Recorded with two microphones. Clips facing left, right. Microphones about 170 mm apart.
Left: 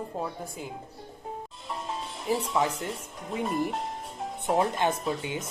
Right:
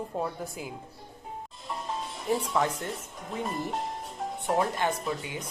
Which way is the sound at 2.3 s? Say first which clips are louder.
Even; centre (ahead or behind).